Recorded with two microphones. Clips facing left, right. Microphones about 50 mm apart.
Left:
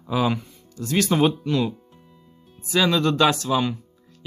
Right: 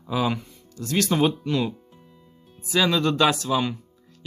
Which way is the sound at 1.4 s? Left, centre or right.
Centre.